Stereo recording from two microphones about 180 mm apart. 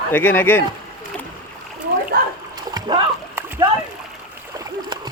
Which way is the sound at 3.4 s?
10° right (ahead or behind).